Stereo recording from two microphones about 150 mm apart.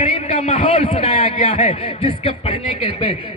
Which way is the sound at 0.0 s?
50° left (ahead or behind).